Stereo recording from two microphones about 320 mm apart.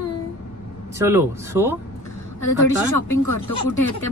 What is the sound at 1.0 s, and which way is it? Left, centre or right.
Speech, centre.